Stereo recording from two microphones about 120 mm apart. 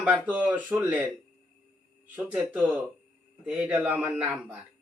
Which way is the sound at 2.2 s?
10° right (ahead or behind).